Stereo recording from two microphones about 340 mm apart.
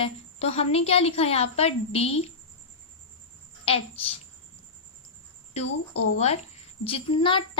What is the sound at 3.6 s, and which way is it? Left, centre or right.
Speech, centre.